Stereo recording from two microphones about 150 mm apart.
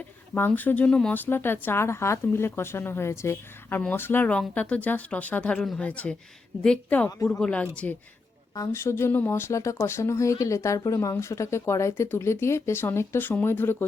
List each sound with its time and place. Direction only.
0.3 s speech: 15° left (ahead or behind)
8.5 s speech: 20° left (ahead or behind)